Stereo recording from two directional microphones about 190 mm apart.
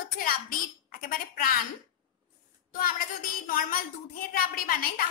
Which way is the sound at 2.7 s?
50° left (ahead or behind).